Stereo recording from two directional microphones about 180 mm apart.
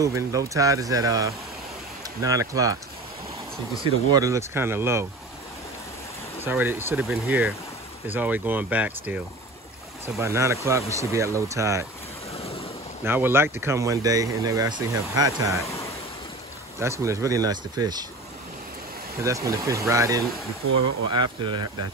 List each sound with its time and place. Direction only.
0.0 s speech: 20° right (ahead or behind)
3.8 s speech: 20° right (ahead or behind)
6.4 s speech: 10° right (ahead or behind)
12.4 s waves: 35° left (ahead or behind)
13.0 s speech: 10° right (ahead or behind)
15.6 s a sound: 15° left (ahead or behind)
16.8 s speech: 15° right (ahead or behind)
19.2 s speech: 15° right (ahead or behind)